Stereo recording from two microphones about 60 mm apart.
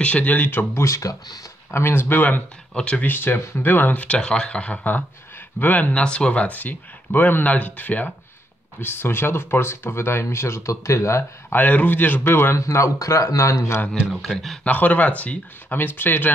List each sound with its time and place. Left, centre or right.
0.0 s speech: left
0.7 s speech: left
1.7 s speech: left
2.7 s speech: centre
3.1 s speech: left
4.2 s speech: centre
8.7 s speech: left
11.5 s speech: left
12.5 s speech: left
14.2 s speech: centre
14.6 s speech: left
15.7 s speech: left